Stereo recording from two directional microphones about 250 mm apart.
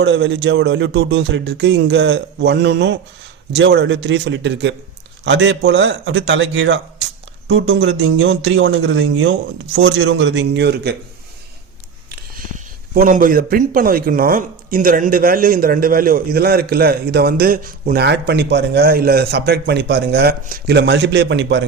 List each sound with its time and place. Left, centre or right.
0.0 s a man's voice: right
12.1 s speech: right